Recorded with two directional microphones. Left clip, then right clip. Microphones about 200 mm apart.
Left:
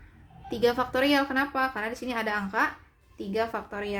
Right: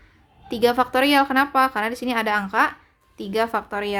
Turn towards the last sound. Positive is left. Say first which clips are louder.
# right 8 dB
turn(degrees=-35)  # may be behind; listen again after turning